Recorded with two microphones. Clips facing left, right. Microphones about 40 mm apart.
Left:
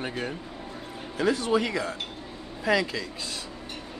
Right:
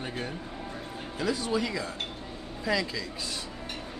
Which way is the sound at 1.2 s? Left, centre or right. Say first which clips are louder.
Left 5 dB; left.